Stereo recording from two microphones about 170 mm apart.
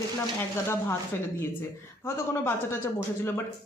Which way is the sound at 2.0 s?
15° left (ahead or behind).